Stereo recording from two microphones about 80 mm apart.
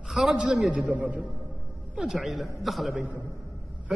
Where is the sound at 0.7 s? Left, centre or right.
Centre.